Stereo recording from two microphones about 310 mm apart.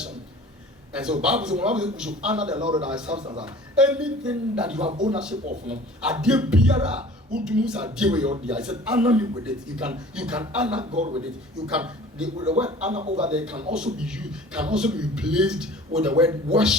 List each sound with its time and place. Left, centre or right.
0.9 s a man's voice: centre
2.5 s a man's voice: centre
2.8 s a man's voice: centre
3.2 s speech: centre
3.4 s a man's voice: centre
4.8 s speech: centre
5.1 s a man's voice: centre
10.9 s speech: right
11.7 s a man's voice: centre
12.9 s speech: right
13.3 s a man's voice: centre